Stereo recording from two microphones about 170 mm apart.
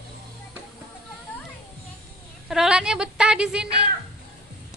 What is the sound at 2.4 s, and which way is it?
Speech, centre (ahead or behind).